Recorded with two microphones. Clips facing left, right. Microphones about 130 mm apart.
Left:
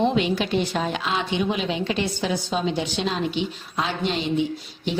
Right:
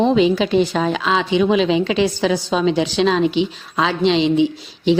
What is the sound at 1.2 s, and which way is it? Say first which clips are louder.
A woman's voice: right 11 dB; 90° right.